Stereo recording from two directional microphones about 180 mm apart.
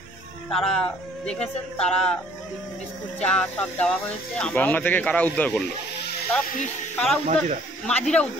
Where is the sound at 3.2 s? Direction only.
10° left (ahead or behind).